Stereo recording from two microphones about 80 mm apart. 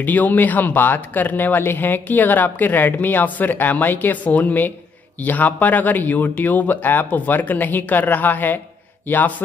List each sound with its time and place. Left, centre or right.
0.0 s a man's voice: left